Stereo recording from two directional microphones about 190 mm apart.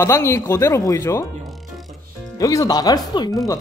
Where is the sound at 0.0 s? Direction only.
15° left (ahead or behind).